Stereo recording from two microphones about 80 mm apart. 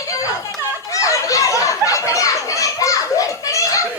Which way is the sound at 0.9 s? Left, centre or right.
Left.